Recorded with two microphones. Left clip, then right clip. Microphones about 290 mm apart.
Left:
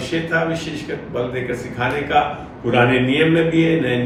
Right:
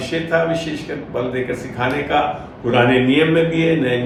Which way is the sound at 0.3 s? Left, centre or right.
Centre.